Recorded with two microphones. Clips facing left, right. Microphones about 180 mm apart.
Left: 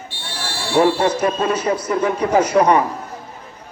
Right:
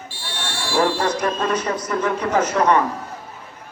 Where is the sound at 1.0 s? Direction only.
10° left (ahead or behind).